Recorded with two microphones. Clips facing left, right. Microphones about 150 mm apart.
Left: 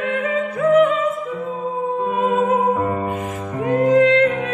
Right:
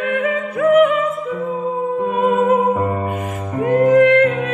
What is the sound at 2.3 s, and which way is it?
Music, 25° left (ahead or behind).